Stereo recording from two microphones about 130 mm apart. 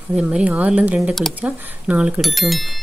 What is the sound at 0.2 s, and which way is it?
A woman's voice, 10° right (ahead or behind).